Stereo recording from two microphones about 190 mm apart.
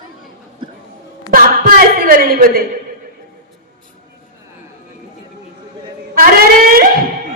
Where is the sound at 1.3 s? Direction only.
50° right (ahead or behind).